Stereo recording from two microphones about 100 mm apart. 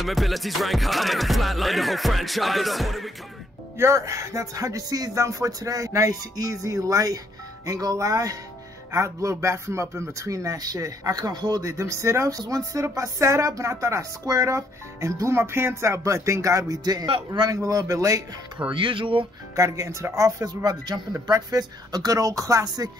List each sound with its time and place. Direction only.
0.0 s music: centre (ahead or behind)
3.7 s speech: 30° right (ahead or behind)
11.8 s speech: 30° right (ahead or behind)
18.7 s speech: 60° right (ahead or behind)
19.5 s speech: 30° right (ahead or behind)